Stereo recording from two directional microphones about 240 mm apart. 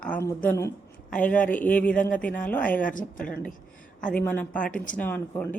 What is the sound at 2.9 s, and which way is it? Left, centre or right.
Speech, left.